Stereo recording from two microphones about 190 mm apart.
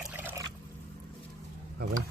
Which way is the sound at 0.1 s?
10° right (ahead or behind).